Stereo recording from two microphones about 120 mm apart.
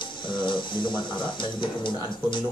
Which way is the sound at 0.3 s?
40° left (ahead or behind).